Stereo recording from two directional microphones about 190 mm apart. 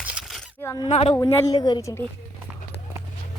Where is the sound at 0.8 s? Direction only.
35° left (ahead or behind).